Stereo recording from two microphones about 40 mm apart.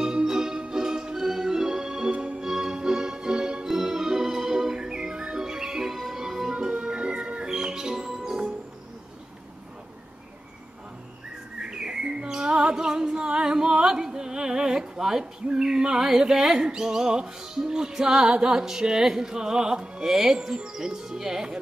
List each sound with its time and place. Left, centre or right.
0.0 s music: centre
2.1 s music: right
2.4 s music: centre; by 7.4 s right
7.4 s music: centre
8.1 s music: centre
11.5 s bird: centre
14.0 s a sound: centre
18.3 s music: centre